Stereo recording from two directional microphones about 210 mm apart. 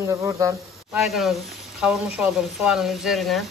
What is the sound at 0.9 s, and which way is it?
Speech, centre (ahead or behind).